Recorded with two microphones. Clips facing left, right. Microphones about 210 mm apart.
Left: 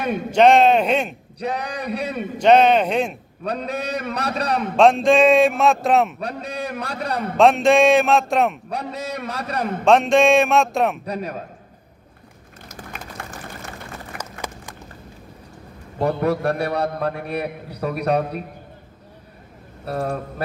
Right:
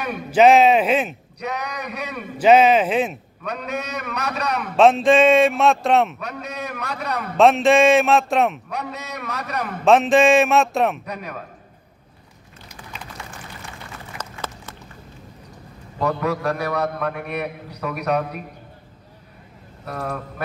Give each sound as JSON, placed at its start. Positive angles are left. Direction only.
{"t": 0.3, "sound": "a man's voice", "side_deg": -5}
{"t": 1.4, "sound": "a man's voice", "side_deg": 30}
{"t": 2.3, "sound": "a man's voice", "side_deg": -5}
{"t": 3.4, "sound": "a man's voice", "side_deg": 30}
{"t": 4.7, "sound": "a man's voice", "side_deg": 0}
{"t": 6.1, "sound": "a man's voice", "side_deg": 30}
{"t": 7.3, "sound": "a man's voice", "side_deg": 0}
{"t": 8.6, "sound": "a man's voice", "side_deg": 30}
{"t": 9.8, "sound": "a man's voice", "side_deg": -5}
{"t": 11.1, "sound": "a man's voice", "side_deg": 30}
{"t": 12.6, "sound": "a sound", "side_deg": 45}
{"t": 16.0, "sound": "a man's voice", "side_deg": 55}
{"t": 16.5, "sound": "a man's voice", "side_deg": 30}
{"t": 19.8, "sound": "a man's voice", "side_deg": 30}